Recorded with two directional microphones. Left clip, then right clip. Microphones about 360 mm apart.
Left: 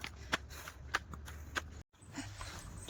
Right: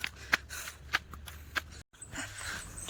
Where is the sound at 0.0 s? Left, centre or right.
Centre.